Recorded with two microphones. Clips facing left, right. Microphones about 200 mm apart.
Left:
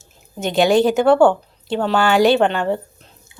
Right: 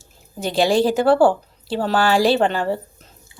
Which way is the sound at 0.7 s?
30° right (ahead or behind).